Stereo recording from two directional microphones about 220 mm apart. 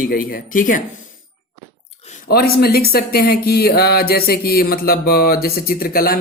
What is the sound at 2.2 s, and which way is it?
Speech, 45° left (ahead or behind).